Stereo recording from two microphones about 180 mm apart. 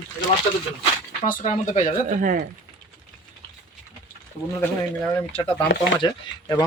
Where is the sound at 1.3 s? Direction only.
40° left (ahead or behind).